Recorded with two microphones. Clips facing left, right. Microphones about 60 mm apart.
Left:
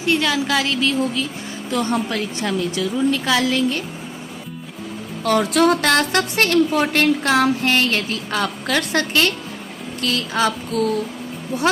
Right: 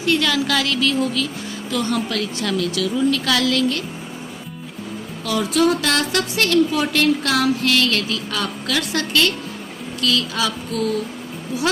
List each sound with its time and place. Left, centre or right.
0.0 s speech: centre
1.7 s music: left
2.7 s a woman's voice: left
5.2 s music: left
11.5 s speech: left